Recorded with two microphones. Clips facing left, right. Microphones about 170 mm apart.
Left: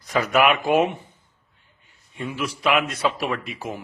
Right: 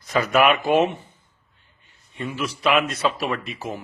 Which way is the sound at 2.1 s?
10° left (ahead or behind).